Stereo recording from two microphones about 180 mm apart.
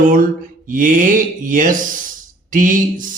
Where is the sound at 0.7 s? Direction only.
45° right (ahead or behind).